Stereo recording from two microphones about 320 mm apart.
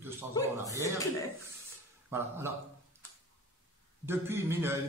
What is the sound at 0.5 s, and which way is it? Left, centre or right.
Speech, centre.